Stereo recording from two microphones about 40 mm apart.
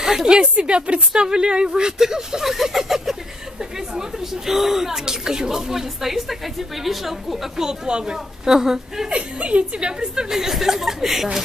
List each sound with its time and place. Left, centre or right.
0.0 s a woman's voice: centre
0.3 s a woman's voice: right; by 7.3 s centre
7.5 s a woman's voice: centre
9.1 s a woman's voice: right
10.3 s a woman's voice: centre